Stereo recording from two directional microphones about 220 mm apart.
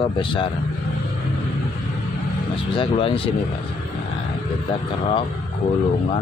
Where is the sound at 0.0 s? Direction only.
20° left (ahead or behind).